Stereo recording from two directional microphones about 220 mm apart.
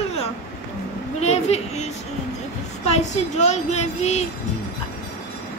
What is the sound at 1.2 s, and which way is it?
Speech, 30° left (ahead or behind).